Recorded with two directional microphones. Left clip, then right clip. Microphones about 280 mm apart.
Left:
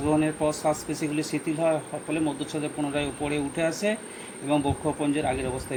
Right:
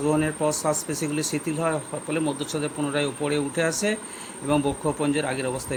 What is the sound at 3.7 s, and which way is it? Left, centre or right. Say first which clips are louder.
Speech: right 1 dB; right.